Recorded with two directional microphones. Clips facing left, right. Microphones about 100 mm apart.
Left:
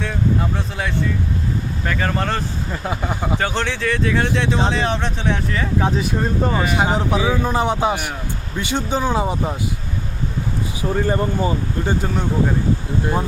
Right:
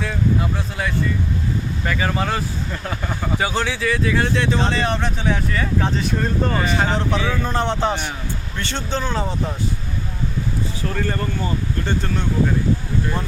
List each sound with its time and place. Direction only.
0.0 s speech: centre (ahead or behind)
2.8 s speech: 10° left (ahead or behind)
3.3 s speech: 5° right (ahead or behind); by 9.5 s 15° left (ahead or behind)
10.8 s speech: 20° left (ahead or behind)